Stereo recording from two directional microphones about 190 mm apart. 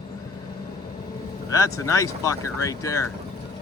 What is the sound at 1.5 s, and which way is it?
Speech, 15° left (ahead or behind).